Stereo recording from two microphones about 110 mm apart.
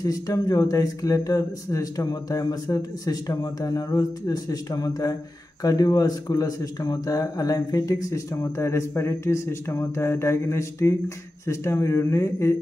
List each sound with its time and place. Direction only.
0.0 s speech: 35° left (ahead or behind)